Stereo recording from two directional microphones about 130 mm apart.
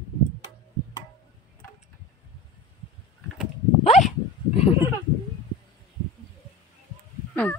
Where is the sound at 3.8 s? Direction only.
60° left (ahead or behind).